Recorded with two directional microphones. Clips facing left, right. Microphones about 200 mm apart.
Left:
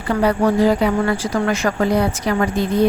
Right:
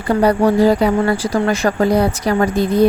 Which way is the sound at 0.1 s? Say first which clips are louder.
Right 3 dB; 35° right (ahead or behind).